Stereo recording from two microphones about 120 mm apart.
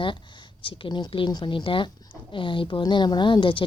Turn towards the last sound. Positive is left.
turn(degrees=45)  # may be behind; listen again after turning